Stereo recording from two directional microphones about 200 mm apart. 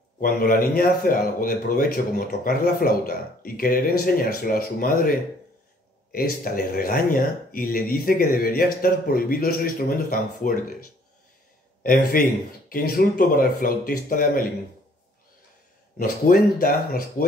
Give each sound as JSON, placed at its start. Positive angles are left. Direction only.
{"t": 0.2, "sound": "speech", "side_deg": 45}
{"t": 6.1, "sound": "speech", "side_deg": 45}
{"t": 11.8, "sound": "speech", "side_deg": 45}
{"t": 16.0, "sound": "speech", "side_deg": 45}